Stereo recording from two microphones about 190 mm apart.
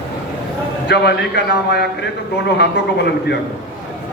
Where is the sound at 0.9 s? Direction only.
60° left (ahead or behind).